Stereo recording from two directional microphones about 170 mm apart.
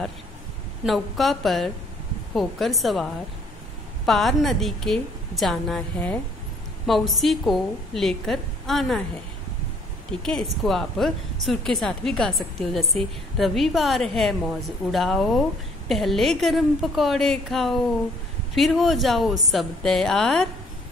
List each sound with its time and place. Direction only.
0.8 s a woman's voice: centre (ahead or behind)
10.2 s a woman's voice: centre (ahead or behind)